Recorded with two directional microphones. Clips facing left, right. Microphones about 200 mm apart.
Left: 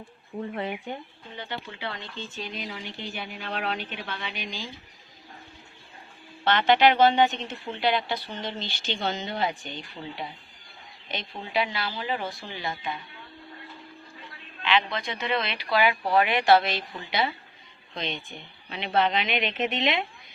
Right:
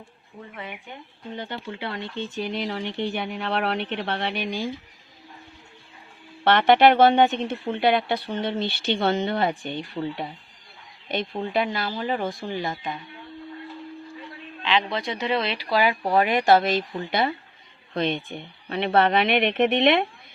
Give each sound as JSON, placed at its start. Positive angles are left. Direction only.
{"t": 0.5, "sound": "speech", "side_deg": 40}
{"t": 1.4, "sound": "speech", "side_deg": -50}
{"t": 6.4, "sound": "speech", "side_deg": -60}
{"t": 14.6, "sound": "speech", "side_deg": -35}